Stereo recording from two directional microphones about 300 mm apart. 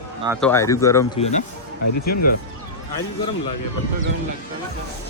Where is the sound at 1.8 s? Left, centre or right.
Left.